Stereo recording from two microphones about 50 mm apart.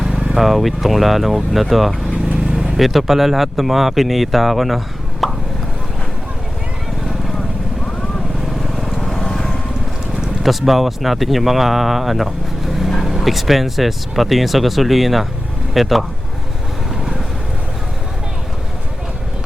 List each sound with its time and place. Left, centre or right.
0.3 s speech: centre
2.5 s vehicle: centre
2.7 s speech: centre
5.2 s a sound: centre
8.7 s vehicle: centre
10.4 s speech: centre